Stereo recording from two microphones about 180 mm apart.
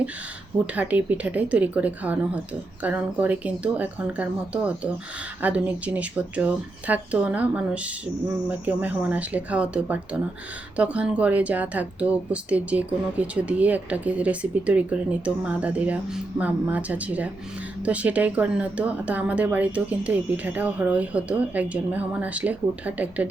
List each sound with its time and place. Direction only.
0.7 s speech: 10° right (ahead or behind)